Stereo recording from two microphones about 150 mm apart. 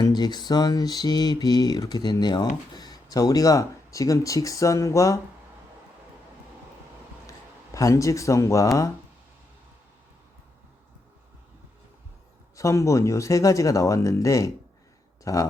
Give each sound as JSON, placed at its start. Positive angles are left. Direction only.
{"t": 0.0, "sound": "mantra", "side_deg": 30}
{"t": 7.3, "sound": "speech", "side_deg": 20}
{"t": 12.5, "sound": "mantra", "side_deg": 20}
{"t": 15.2, "sound": "speech", "side_deg": 20}